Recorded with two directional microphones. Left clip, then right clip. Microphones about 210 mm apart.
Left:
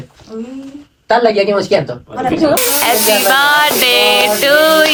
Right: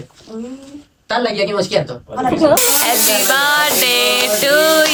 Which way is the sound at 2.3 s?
5° right (ahead or behind).